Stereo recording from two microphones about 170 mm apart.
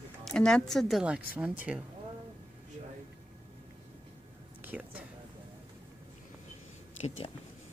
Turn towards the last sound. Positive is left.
turn(degrees=30)  # may be behind; listen again after turning